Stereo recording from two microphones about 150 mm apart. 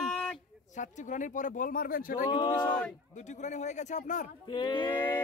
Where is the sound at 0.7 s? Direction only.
55° left (ahead or behind); by 2.2 s 75° left (ahead or behind).